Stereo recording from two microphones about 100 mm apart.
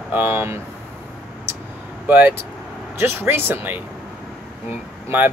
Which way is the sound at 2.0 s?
15° right (ahead or behind).